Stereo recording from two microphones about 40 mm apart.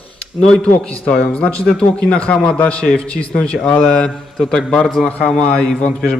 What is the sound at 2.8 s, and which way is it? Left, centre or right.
Speech, left.